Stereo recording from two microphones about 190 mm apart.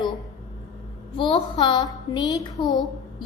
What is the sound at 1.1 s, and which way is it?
A woman's voice, 25° left (ahead or behind).